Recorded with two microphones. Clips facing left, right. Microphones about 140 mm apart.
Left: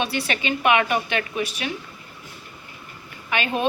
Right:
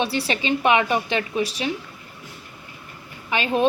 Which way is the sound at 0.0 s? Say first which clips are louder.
Right 2 dB; 30° right (ahead or behind).